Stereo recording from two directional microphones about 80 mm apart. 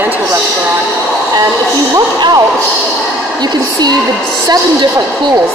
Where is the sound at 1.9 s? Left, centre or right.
Right.